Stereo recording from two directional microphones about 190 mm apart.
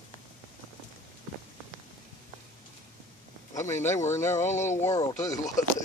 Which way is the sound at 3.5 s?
15° left (ahead or behind).